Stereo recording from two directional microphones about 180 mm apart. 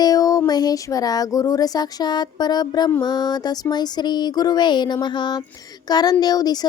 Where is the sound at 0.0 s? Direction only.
20° left (ahead or behind).